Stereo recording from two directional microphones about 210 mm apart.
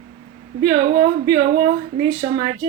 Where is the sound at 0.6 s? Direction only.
20° right (ahead or behind).